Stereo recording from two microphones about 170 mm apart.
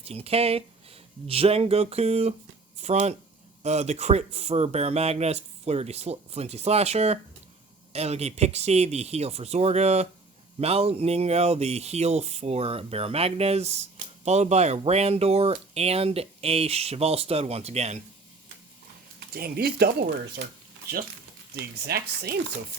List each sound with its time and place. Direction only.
0.0 s speech: 35° right (ahead or behind)
19.3 s speech: 65° right (ahead or behind)
21.5 s speech: 75° right (ahead or behind)